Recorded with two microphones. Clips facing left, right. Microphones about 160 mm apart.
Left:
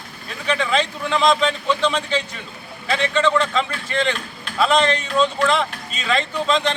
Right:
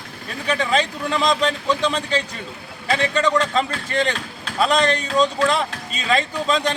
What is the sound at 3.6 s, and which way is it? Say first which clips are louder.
A man's voice: right 1 dB; 40° right (ahead or behind).